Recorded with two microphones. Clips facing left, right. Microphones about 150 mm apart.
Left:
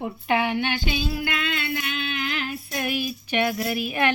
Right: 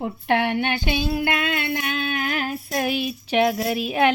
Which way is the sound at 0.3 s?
65° right (ahead or behind).